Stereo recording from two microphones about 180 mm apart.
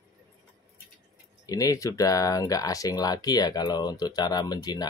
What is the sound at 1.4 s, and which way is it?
Speech, 20° left (ahead or behind).